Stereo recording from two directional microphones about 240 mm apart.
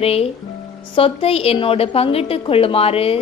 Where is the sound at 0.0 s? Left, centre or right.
Left.